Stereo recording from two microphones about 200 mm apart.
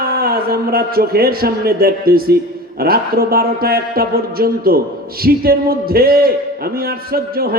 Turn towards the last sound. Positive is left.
turn(degrees=-50)  # may be behind; listen again after turning